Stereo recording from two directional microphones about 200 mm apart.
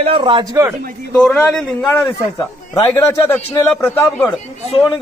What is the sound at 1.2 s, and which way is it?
A man's voice, 5° left (ahead or behind).